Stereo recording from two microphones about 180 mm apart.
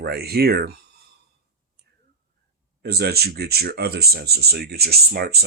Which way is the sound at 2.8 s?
60° right (ahead or behind).